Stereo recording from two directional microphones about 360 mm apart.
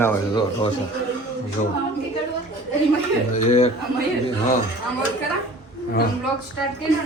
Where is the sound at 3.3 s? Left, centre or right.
Centre.